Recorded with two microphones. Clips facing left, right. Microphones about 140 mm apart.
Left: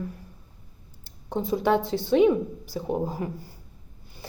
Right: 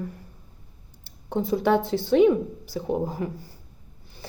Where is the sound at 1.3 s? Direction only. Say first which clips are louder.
Right 1 dB; 5° right (ahead or behind).